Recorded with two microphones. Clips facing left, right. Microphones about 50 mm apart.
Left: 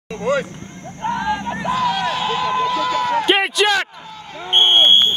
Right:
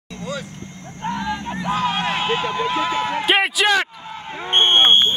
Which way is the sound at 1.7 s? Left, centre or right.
Right.